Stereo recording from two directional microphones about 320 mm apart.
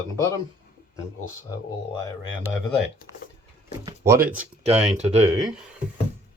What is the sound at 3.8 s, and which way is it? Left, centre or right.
Speech, centre.